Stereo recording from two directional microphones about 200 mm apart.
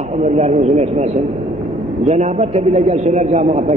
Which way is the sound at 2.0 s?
35° right (ahead or behind).